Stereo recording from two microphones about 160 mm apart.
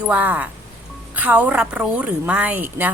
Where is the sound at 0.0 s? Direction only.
10° right (ahead or behind).